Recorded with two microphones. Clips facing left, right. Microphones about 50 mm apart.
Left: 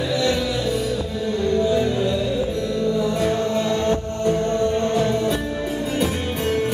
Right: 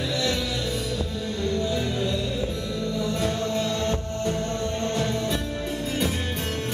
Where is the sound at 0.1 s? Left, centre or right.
Centre.